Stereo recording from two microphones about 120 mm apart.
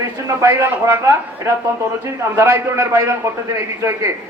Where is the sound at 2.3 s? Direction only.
20° right (ahead or behind).